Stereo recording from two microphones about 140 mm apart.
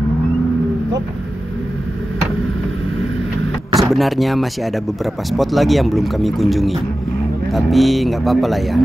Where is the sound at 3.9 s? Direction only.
Centre (ahead or behind).